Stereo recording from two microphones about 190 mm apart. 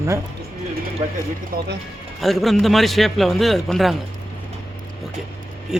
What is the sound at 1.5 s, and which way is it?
Speech, 50° right (ahead or behind).